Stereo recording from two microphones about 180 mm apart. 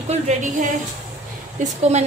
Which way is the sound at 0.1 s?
45° right (ahead or behind).